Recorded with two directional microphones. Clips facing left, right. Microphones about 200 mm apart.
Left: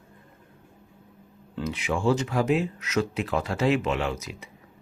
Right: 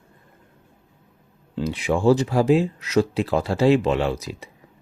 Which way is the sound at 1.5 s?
30° right (ahead or behind).